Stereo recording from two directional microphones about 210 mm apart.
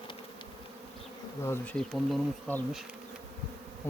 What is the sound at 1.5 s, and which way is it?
Bee, 5° left (ahead or behind).